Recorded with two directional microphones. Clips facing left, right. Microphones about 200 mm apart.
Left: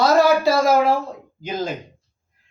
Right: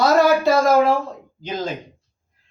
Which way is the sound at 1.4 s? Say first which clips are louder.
Left 1 dB; 10° left (ahead or behind).